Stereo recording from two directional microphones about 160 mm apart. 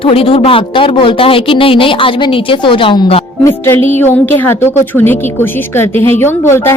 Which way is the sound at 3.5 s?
15° left (ahead or behind).